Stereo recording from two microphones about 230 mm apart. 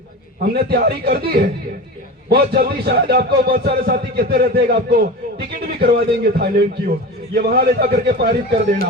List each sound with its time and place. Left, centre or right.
0.3 s a man's voice: right